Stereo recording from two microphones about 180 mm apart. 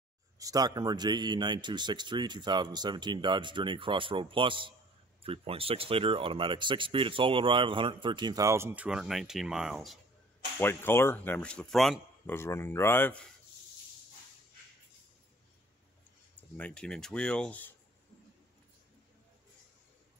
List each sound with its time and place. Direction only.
0.4 s speech: 20° right (ahead or behind); by 9.9 s centre (ahead or behind)
10.6 s speech: 10° left (ahead or behind)
12.3 s speech: 15° left (ahead or behind)
16.3 s speech: 10° left (ahead or behind)